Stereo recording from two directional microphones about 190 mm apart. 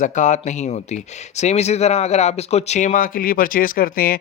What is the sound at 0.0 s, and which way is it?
Speech, 40° left (ahead or behind).